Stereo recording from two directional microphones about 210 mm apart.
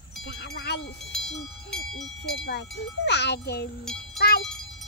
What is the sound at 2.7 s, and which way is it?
Wind chime, 55° left (ahead or behind).